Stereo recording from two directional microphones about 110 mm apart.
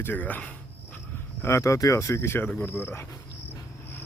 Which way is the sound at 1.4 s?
25° left (ahead or behind).